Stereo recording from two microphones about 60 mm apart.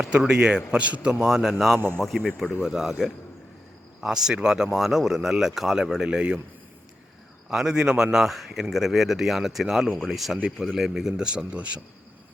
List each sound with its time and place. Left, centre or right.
0.2 s a man's voice: centre
1.2 s speech: centre
4.0 s speech: centre
7.5 s speech: centre
8.7 s speech: centre